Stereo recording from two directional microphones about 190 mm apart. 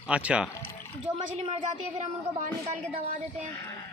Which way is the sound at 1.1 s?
30° right (ahead or behind).